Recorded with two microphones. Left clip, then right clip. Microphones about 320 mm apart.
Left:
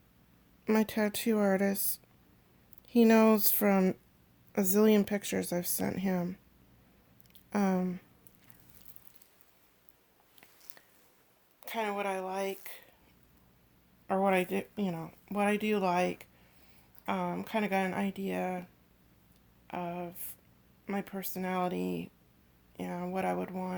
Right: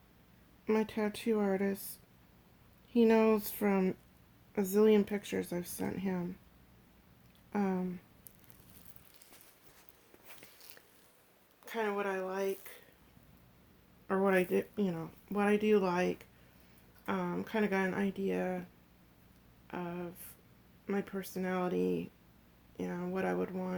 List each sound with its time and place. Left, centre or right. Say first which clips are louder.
0.6 s speech: left 3 dB; left
7.5 s speech: left 4 dB; left
11.6 s speech: left 1 dB; left
14.1 s speech: left 1 dB; centre
19.6 s a sound: left 4 dB; left
20.8 s speech: even; left